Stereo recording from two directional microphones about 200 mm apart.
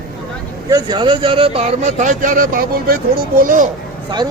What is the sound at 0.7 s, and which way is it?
Speech, 20° right (ahead or behind).